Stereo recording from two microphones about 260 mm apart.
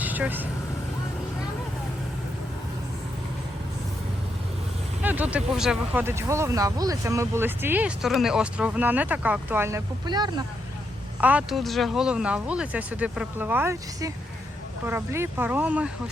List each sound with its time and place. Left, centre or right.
0.0 s vehicle: centre
5.0 s speech: centre
11.2 s speech: centre